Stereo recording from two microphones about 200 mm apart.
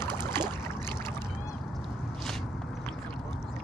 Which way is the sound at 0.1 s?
20° right (ahead or behind).